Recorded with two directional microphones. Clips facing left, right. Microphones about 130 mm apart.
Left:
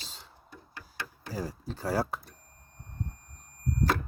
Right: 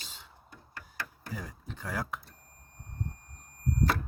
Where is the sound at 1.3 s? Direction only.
35° left (ahead or behind).